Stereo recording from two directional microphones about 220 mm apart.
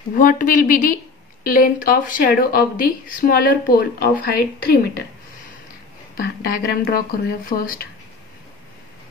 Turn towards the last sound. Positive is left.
turn(degrees=40)  # may be behind; listen again after turning